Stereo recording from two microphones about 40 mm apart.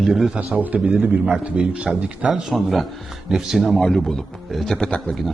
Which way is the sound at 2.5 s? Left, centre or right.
Centre.